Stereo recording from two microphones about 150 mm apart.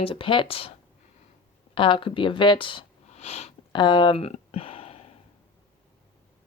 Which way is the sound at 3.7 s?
30° left (ahead or behind).